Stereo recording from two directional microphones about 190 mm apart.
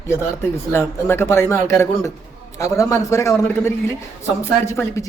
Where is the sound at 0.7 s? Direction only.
10° left (ahead or behind).